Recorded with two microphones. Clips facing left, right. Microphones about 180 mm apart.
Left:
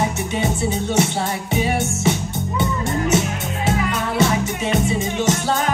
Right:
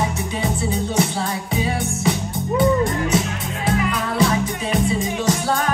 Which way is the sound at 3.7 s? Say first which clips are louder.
Even; 25° left (ahead or behind).